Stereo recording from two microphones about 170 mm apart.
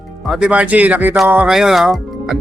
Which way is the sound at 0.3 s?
5° right (ahead or behind).